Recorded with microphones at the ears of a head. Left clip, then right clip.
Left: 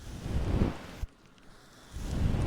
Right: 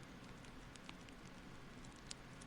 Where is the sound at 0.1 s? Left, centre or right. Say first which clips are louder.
Left 18 dB; left.